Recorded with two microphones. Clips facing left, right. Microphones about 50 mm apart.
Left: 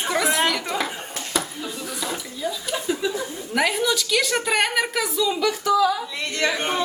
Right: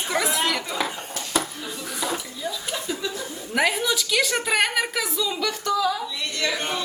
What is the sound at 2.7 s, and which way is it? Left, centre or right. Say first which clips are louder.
Chuckle: left 4 dB; centre.